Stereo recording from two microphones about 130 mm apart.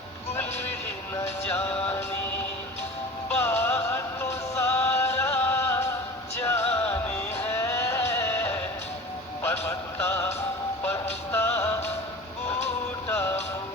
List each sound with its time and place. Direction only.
1.1 s music: 15° left (ahead or behind)
3.6 s music: 20° left (ahead or behind)
7.3 s a sound: 20° left (ahead or behind)
9.4 s music: 20° left (ahead or behind)
13.1 s music: 20° left (ahead or behind)